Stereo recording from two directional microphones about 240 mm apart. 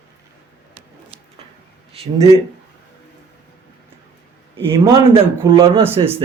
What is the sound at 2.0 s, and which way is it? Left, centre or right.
Speech, right.